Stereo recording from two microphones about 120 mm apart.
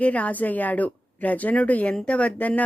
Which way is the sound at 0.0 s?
10° left (ahead or behind).